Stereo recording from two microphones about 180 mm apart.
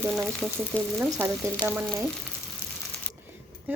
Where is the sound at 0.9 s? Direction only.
10° right (ahead or behind).